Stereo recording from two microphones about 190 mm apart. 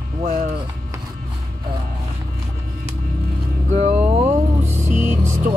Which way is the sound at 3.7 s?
35° right (ahead or behind).